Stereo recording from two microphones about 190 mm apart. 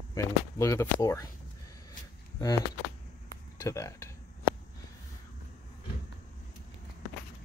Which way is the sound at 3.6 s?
15° left (ahead or behind).